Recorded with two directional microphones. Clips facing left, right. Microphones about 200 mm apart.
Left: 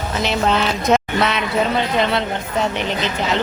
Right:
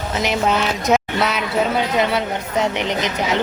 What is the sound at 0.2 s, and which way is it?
Speech, 10° right (ahead or behind).